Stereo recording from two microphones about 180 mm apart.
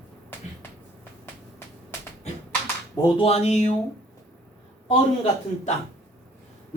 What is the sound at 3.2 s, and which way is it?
Speech, 35° left (ahead or behind).